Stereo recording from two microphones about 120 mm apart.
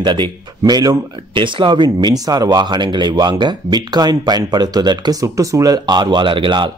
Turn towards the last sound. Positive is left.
turn(degrees=-45)  # may be behind; listen again after turning